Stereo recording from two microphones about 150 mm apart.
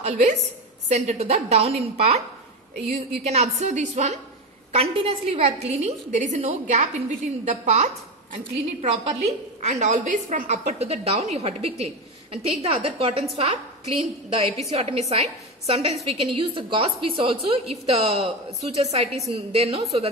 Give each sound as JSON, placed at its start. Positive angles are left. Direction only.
{"t": 0.0, "sound": "a woman's voice", "side_deg": -45}
{"t": 3.3, "sound": "a woman's voice", "side_deg": -50}